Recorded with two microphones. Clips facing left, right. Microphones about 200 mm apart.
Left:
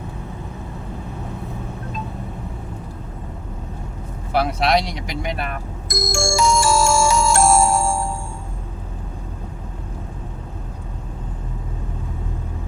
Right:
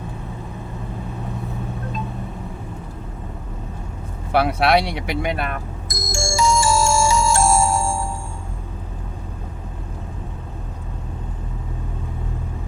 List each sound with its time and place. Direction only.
4.3 s speech: 60° right (ahead or behind)
5.9 s music: 55° left (ahead or behind)